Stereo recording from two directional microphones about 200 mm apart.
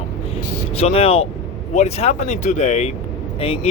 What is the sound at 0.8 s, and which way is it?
Speech, 30° left (ahead or behind).